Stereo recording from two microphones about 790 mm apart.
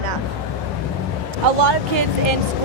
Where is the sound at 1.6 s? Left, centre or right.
Right.